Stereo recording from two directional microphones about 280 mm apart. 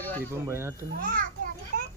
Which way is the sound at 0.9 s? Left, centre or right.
Right.